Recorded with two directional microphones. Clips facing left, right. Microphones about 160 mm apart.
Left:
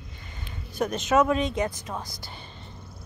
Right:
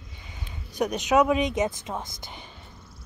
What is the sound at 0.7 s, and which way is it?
Speech, 15° right (ahead or behind).